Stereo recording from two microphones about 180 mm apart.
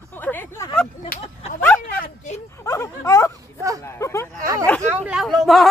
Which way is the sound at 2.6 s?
15° left (ahead or behind).